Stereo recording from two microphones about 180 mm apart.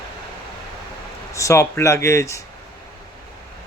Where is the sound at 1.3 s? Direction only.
15° left (ahead or behind).